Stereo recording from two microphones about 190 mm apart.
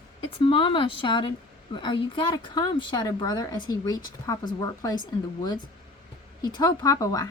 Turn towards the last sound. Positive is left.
turn(degrees=20)  # may be behind; listen again after turning